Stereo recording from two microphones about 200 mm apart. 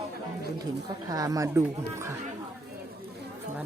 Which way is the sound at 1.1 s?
15° right (ahead or behind).